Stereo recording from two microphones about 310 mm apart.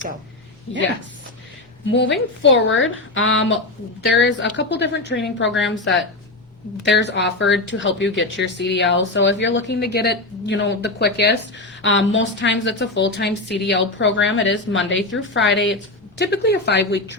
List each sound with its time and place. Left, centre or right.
0.7 s speech: left
1.9 s speech: left